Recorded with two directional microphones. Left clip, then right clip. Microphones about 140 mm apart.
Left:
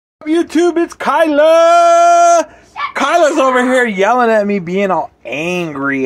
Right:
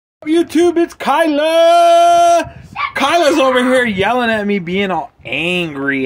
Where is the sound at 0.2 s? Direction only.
15° right (ahead or behind).